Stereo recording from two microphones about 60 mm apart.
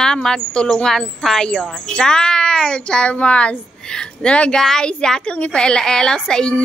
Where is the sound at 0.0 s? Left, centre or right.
Centre.